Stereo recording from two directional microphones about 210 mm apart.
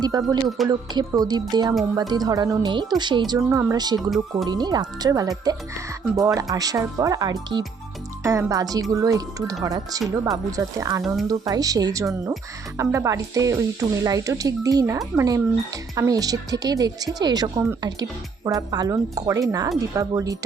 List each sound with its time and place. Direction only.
0.0 s speech: 15° right (ahead or behind)